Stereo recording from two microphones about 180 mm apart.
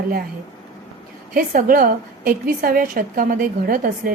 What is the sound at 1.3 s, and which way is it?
A woman's voice, 50° right (ahead or behind).